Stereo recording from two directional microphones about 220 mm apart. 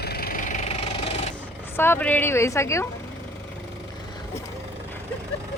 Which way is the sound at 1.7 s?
10° left (ahead or behind).